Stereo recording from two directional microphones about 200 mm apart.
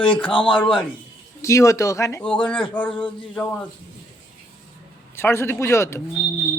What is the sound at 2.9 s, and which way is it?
Speech, 25° left (ahead or behind).